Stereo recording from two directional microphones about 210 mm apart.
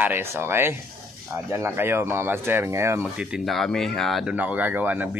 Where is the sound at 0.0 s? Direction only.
10° right (ahead or behind).